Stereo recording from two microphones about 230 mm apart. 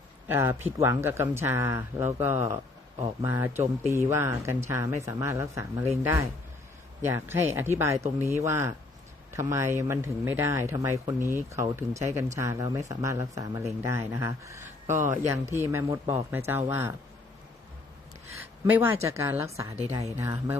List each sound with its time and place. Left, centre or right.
0.3 s speech: centre
18.3 s speech: centre